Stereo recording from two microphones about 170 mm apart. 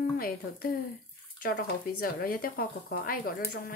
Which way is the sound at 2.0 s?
60° left (ahead or behind).